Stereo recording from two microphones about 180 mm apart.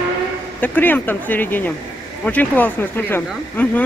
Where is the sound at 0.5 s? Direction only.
10° left (ahead or behind).